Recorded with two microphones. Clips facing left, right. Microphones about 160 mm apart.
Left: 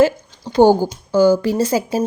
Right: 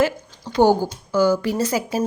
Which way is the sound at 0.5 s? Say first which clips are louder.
Left 4 dB; 30° left (ahead or behind).